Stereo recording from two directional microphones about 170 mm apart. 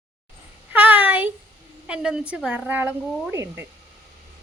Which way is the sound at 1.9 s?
5° right (ahead or behind).